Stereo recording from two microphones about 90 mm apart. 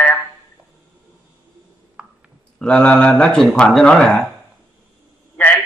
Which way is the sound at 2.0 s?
10° right (ahead or behind).